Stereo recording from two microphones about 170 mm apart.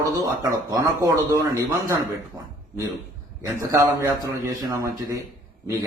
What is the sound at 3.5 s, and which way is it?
A man's voice, 15° right (ahead or behind).